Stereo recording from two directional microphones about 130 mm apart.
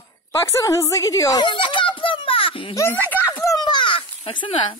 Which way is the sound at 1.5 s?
40° left (ahead or behind).